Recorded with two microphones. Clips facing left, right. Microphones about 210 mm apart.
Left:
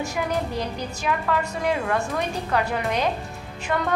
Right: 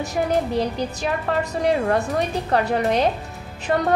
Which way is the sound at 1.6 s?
35° right (ahead or behind).